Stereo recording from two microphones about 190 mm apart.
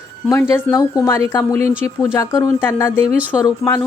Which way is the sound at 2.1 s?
15° left (ahead or behind).